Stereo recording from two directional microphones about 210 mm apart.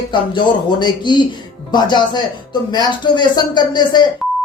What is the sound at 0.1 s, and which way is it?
Speech, 20° left (ahead or behind).